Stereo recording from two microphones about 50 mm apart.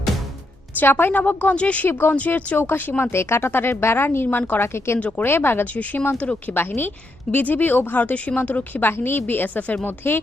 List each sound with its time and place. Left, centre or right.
0.8 s a woman's voice: left
1.9 s speech: left
2.1 s a woman's voice: left
3.0 s speech: left
4.6 s speech: left
4.9 s speech: left
5.2 s speech: left
5.7 s a woman's voice: left
6.5 s a woman's voice: left
8.8 s speech: left